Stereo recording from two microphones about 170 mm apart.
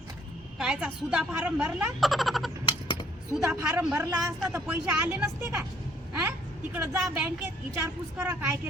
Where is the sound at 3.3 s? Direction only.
5° right (ahead or behind).